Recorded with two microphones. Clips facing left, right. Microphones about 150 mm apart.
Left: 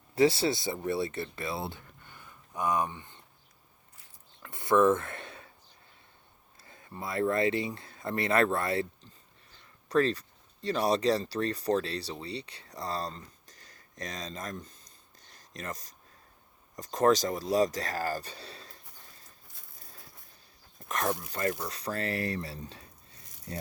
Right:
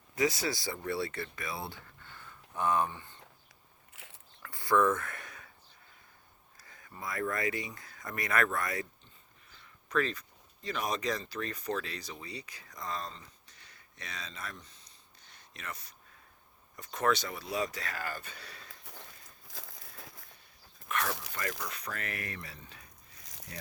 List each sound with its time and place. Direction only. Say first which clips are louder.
0.2 s speech: left 6 dB; 30° left (ahead or behind)
4.4 s a sound: left 4 dB; 20° left (ahead or behind)
6.6 s speech: left 4 dB; 25° left (ahead or behind)
19.5 s crumpling: right 9 dB; 90° right
20.7 s a sound: left 3 dB; 35° left (ahead or behind)
21.1 s speech: left 6 dB; 90° right
21.7 s speech: left 7 dB; 35° left (ahead or behind)